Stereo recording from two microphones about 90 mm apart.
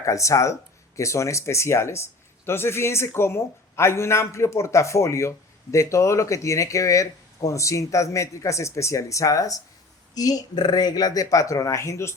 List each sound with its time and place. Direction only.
0.0 s speech: 35° left (ahead or behind)